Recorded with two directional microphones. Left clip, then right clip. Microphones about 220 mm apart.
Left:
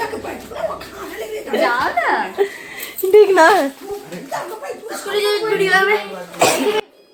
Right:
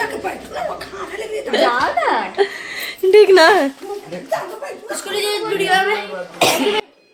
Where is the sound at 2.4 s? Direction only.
20° right (ahead or behind).